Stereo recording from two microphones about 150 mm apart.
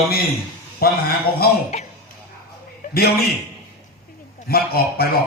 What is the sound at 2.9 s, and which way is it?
Speech, 90° left.